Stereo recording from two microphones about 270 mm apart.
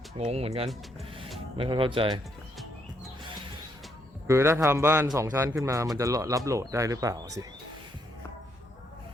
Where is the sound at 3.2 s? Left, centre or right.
Centre.